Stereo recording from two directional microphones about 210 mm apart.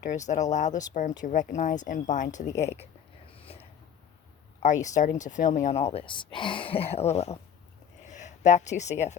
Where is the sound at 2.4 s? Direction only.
15° left (ahead or behind).